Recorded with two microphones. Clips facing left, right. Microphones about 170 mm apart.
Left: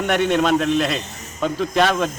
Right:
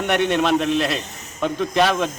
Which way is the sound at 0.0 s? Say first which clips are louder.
Left 1 dB; centre (ahead or behind).